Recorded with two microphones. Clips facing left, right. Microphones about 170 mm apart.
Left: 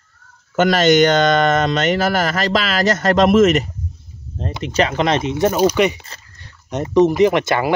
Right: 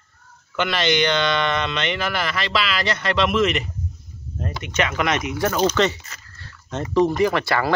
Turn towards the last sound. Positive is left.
turn(degrees=20)  # may be behind; listen again after turning